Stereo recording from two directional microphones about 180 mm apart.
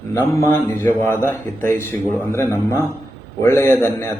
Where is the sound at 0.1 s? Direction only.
15° left (ahead or behind).